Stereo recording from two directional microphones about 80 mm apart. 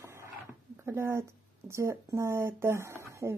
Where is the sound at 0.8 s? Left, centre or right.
Right.